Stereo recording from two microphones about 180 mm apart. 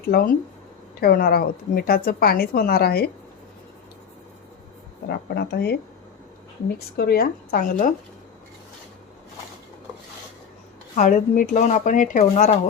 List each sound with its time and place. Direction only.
0.0 s a woman's voice: 60° left (ahead or behind)
5.0 s a woman's voice: 60° left (ahead or behind)
10.9 s speech: 45° left (ahead or behind)